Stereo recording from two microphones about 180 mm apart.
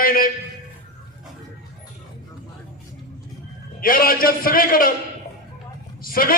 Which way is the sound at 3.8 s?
55° left (ahead or behind).